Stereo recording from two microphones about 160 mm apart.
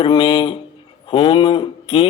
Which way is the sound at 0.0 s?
35° left (ahead or behind).